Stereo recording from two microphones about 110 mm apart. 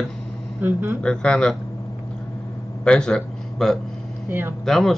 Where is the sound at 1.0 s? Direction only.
5° left (ahead or behind).